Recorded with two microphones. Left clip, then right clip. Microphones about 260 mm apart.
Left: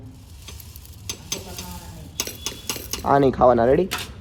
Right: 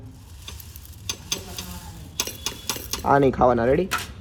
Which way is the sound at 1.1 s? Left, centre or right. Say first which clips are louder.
Even; centre.